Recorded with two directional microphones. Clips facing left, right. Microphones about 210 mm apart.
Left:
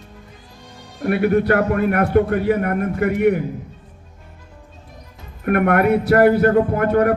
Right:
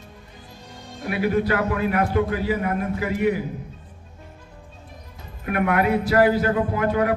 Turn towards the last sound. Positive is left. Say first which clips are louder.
# left 5 dB
turn(degrees=60)  # may be behind; listen again after turning